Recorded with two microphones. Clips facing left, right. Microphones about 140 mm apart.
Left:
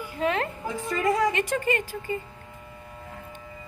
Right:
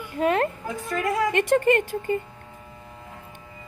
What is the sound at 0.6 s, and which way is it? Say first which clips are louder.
Speech: left 1 dB; centre (ahead or behind).